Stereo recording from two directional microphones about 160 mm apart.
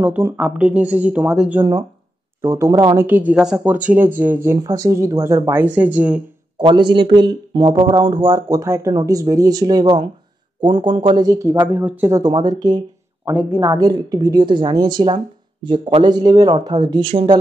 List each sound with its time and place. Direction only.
0.0 s speech: 10° right (ahead or behind)
1.6 s speech: 15° right (ahead or behind)
3.1 s speech: 10° right (ahead or behind)
6.6 s speech: 30° right (ahead or behind)
13.3 s speech: 10° right (ahead or behind)
13.8 s speech: 25° right (ahead or behind)